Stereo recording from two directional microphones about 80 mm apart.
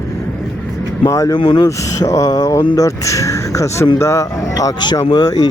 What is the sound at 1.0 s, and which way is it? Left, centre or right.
Speech, left.